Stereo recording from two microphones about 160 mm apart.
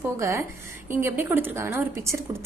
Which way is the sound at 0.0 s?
20° right (ahead or behind).